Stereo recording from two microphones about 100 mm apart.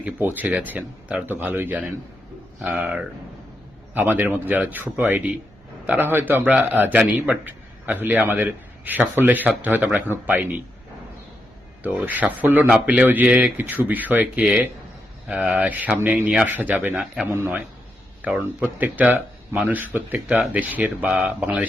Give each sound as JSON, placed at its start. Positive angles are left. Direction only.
{"t": 0.0, "sound": "a man's voice", "side_deg": -20}
{"t": 11.8, "sound": "a man's voice", "side_deg": -15}
{"t": 16.5, "sound": "a man's voice", "side_deg": -20}